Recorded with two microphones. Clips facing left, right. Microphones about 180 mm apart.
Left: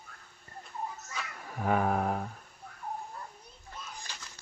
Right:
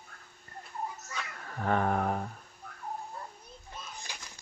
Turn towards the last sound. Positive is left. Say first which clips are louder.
# right 1 dB
turn(degrees=-10)  # may be behind; listen again after turning